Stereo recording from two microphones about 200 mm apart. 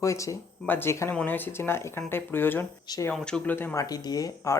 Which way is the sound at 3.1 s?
5° left (ahead or behind).